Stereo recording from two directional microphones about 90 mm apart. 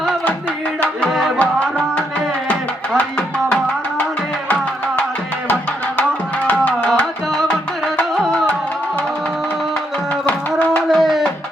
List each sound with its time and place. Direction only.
1.0 s music: centre (ahead or behind)
1.4 s music: 15° left (ahead or behind)
6.5 s music: 15° left (ahead or behind)
10.2 s music: 20° left (ahead or behind)
10.8 s tabla: centre (ahead or behind)